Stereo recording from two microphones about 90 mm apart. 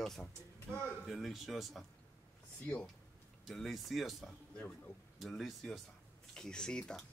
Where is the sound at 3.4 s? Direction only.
Centre (ahead or behind).